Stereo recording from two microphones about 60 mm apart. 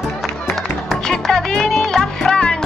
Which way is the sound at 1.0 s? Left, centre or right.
Centre.